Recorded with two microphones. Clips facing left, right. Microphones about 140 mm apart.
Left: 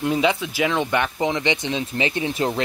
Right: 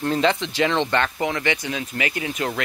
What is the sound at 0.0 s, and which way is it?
Speech, 10° left (ahead or behind).